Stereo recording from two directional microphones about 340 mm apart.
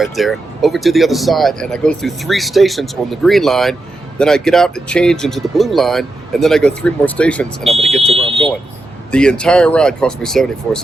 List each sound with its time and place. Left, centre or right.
0.0 s speech: centre
8.0 s speech: centre
9.1 s speech: centre